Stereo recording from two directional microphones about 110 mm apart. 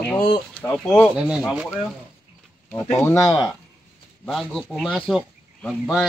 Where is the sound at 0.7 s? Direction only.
5° left (ahead or behind).